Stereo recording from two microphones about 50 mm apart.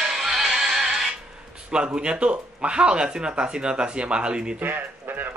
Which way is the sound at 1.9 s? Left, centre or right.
Centre.